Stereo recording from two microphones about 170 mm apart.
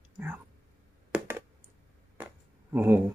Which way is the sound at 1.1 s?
10° right (ahead or behind).